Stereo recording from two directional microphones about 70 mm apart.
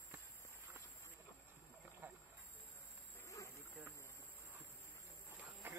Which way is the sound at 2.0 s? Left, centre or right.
Right.